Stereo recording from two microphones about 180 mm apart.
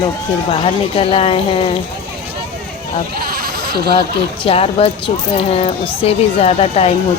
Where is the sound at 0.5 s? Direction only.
30° left (ahead or behind).